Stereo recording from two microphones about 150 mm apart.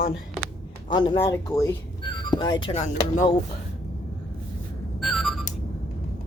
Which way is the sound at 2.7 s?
50° left (ahead or behind).